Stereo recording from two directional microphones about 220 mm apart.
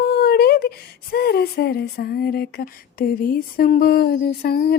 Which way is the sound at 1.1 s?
45° left (ahead or behind).